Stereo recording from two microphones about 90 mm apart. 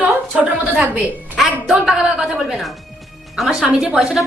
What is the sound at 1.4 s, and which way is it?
A woman's voice, 5° right (ahead or behind).